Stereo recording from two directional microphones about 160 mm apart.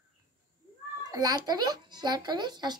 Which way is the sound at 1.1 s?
25° right (ahead or behind).